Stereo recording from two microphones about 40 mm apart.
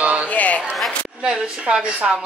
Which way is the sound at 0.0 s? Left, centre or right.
Right.